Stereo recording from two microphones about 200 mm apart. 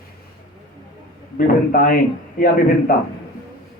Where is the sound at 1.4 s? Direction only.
45° left (ahead or behind).